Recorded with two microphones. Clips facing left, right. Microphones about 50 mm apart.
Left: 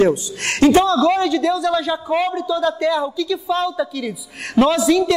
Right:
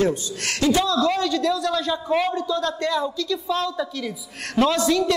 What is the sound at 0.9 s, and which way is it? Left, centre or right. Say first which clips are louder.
A man's voice: left 5 dB; left.